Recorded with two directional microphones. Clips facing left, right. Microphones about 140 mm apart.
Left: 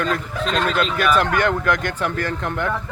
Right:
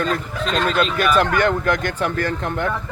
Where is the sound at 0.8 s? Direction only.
35° right (ahead or behind).